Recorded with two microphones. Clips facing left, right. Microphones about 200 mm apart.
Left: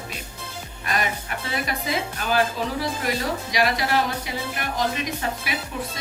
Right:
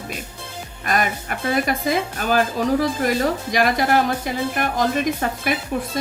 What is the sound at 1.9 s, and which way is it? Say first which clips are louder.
A woman's voice: right 5 dB; 50° right (ahead or behind).